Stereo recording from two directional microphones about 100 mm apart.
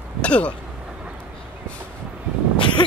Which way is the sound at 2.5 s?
55° left (ahead or behind).